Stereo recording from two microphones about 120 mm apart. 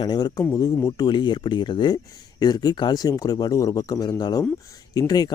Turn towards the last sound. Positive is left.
turn(degrees=30)  # may be behind; listen again after turning